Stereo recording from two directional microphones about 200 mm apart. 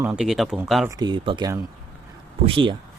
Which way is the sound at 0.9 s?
20° right (ahead or behind).